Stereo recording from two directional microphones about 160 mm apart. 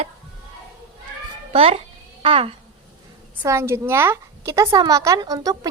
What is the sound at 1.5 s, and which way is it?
Babbling, 40° right (ahead or behind).